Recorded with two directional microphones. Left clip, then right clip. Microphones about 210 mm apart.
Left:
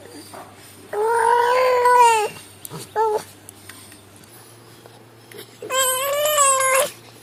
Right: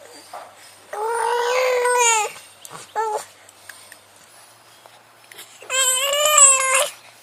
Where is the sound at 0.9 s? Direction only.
15° right (ahead or behind).